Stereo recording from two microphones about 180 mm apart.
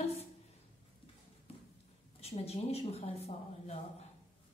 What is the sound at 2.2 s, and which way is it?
A woman's voice, 35° left (ahead or behind).